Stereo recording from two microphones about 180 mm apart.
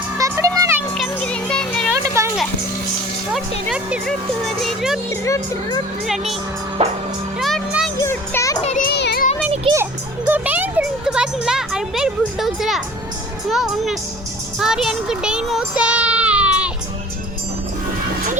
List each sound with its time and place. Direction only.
0.2 s music: 15° right (ahead or behind)
0.9 s music: 5° left (ahead or behind)
1.9 s a sound: 15° right (ahead or behind)
3.7 s speech: 5° right (ahead or behind)
5.2 s speech: 15° left (ahead or behind)
7.3 s music: centre (ahead or behind)
8.0 s children playing: 15° left (ahead or behind)
8.9 s music: 65° left (ahead or behind)
9.7 s music: 10° right (ahead or behind)
13.5 s a child's voice: centre (ahead or behind)